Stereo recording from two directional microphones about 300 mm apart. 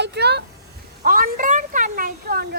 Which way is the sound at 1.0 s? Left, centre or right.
Right.